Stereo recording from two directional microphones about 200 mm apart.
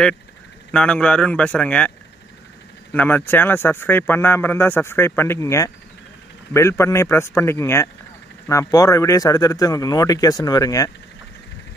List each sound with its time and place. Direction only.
0.7 s speech: 5° left (ahead or behind)
2.9 s speech: 10° left (ahead or behind)